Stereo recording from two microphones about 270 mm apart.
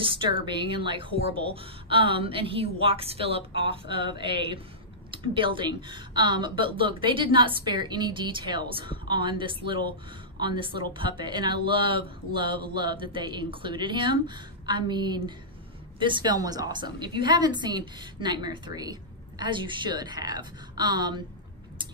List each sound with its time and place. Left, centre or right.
0.0 s a woman's voice: centre